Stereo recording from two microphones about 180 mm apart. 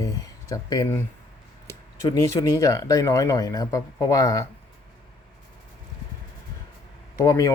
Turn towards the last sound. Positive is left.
turn(degrees=15)  # may be behind; listen again after turning